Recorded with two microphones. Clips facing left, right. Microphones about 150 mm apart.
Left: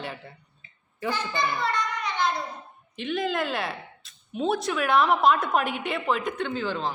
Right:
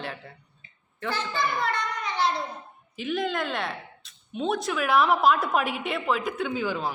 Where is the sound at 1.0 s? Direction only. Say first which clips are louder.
Left 1 dB; 10° left (ahead or behind).